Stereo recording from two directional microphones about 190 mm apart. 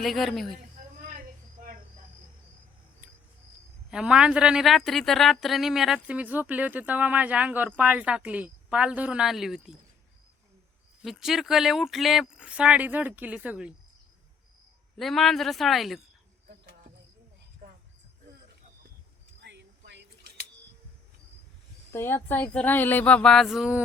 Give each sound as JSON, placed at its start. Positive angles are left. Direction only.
{"t": 0.0, "sound": "speech", "side_deg": 0}
{"t": 3.9, "sound": "speech", "side_deg": -5}
{"t": 11.0, "sound": "speech", "side_deg": 0}
{"t": 14.9, "sound": "speech", "side_deg": 0}
{"t": 17.6, "sound": "a sound", "side_deg": -50}
{"t": 19.4, "sound": "a sound", "side_deg": -65}
{"t": 21.9, "sound": "speech", "side_deg": 10}